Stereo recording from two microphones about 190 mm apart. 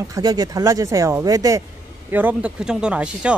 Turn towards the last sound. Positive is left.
turn(degrees=-5)  # may be behind; listen again after turning